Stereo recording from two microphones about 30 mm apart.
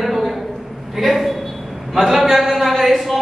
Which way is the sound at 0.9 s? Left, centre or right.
Centre.